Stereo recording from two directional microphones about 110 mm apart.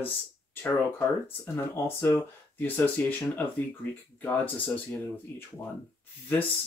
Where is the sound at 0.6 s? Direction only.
20° left (ahead or behind).